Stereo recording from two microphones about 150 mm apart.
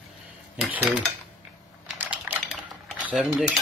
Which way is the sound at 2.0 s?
10° right (ahead or behind).